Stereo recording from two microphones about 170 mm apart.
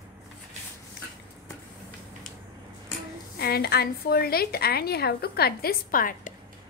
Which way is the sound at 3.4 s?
65° left (ahead or behind).